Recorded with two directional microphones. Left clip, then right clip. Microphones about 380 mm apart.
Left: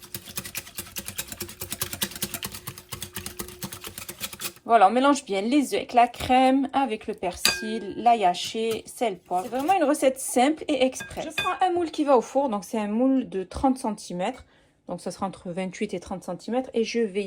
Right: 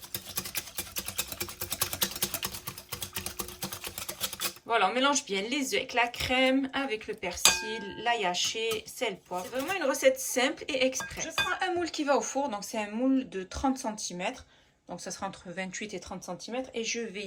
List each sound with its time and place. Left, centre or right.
4.7 s a woman's voice: centre
13.8 s speech: left
15.0 s a woman's voice: centre